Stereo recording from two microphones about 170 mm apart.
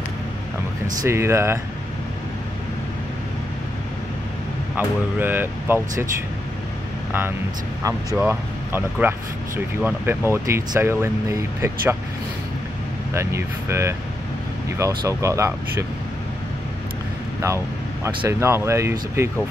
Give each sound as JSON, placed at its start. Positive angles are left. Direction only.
{"t": 1.0, "sound": "speech", "side_deg": -15}
{"t": 4.7, "sound": "speech", "side_deg": -10}
{"t": 7.1, "sound": "speech", "side_deg": -10}
{"t": 13.1, "sound": "speech", "side_deg": -15}
{"t": 18.0, "sound": "speech", "side_deg": -15}